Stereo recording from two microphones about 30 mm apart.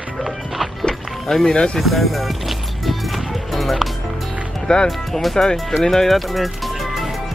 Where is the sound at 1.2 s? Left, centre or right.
Centre.